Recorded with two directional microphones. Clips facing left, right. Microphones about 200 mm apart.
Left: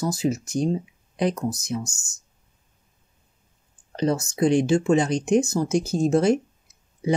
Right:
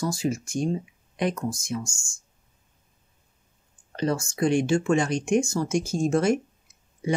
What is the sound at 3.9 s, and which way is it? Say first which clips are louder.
Speech: left 3 dB; 20° left (ahead or behind).